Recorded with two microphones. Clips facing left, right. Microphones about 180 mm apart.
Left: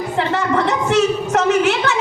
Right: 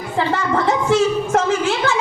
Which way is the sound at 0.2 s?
70° left (ahead or behind).